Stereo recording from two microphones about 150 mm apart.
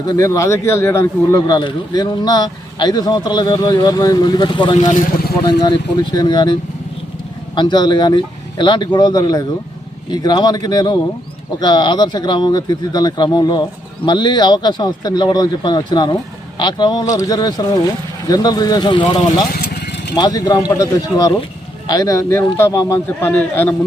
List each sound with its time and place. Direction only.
0.1 s a man's voice: 20° left (ahead or behind)